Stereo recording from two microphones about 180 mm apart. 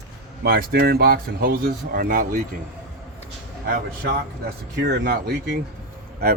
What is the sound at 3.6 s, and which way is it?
Speech, 55° right (ahead or behind).